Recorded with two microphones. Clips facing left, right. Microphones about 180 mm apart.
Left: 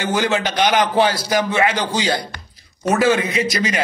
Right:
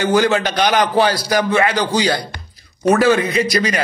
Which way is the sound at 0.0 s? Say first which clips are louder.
Right 4 dB; 20° left (ahead or behind).